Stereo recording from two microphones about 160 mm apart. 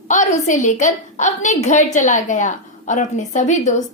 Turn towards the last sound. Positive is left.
turn(degrees=50)  # may be behind; listen again after turning